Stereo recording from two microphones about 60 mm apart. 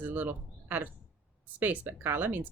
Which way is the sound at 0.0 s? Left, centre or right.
Right.